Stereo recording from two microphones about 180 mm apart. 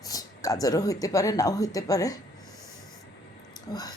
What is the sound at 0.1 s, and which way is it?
Speech, 20° left (ahead or behind).